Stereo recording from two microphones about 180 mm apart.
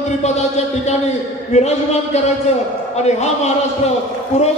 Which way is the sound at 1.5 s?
40° left (ahead or behind).